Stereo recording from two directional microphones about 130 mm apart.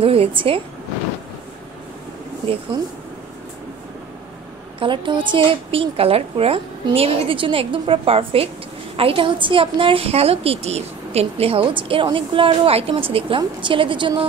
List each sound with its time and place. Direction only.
0.0 s a woman's voice: 45° right (ahead or behind)
2.7 s a woman's voice: 35° right (ahead or behind)
4.7 s a woman's voice: 40° right (ahead or behind)